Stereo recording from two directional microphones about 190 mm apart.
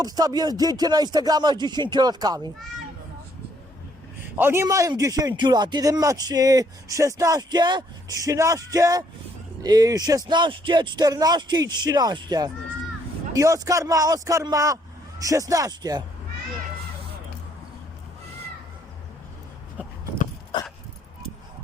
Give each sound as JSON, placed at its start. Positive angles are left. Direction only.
{"t": 0.0, "sound": "a man's voice", "side_deg": -20}
{"t": 4.4, "sound": "a man's voice", "side_deg": -10}